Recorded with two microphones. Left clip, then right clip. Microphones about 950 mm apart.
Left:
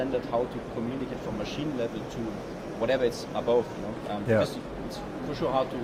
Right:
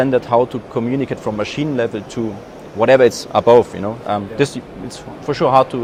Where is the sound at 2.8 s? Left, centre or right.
Right.